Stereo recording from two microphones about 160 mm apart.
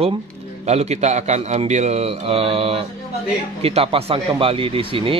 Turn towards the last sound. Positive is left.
turn(degrees=-35)  # may be behind; listen again after turning